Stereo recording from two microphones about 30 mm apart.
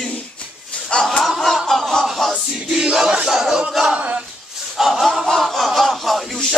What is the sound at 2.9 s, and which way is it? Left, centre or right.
Battle cry, right.